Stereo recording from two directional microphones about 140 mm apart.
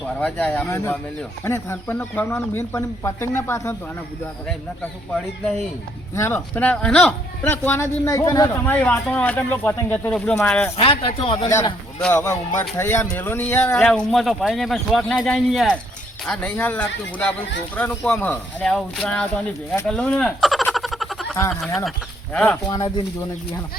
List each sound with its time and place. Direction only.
0.0 s speech: 10° left (ahead or behind)
6.1 s speech: 15° left (ahead or behind)
8.5 s speech: 15° left (ahead or behind)
10.8 s speech: 40° left (ahead or behind)
11.9 s speech: 5° left (ahead or behind)
20.0 s a sound: 5° left (ahead or behind)
21.5 s speech: centre (ahead or behind)